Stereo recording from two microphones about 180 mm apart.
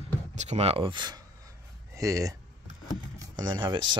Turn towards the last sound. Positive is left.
turn(degrees=-25)  # may be behind; listen again after turning